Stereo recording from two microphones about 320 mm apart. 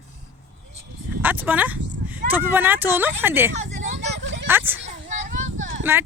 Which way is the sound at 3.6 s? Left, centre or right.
Right.